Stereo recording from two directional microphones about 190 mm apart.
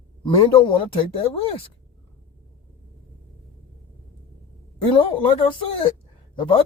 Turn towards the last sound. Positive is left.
turn(degrees=25)  # may be behind; listen again after turning